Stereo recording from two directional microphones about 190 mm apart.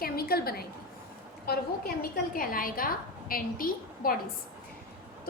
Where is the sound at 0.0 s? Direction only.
55° left (ahead or behind).